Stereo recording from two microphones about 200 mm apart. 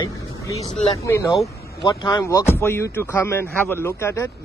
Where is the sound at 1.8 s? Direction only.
20° left (ahead or behind).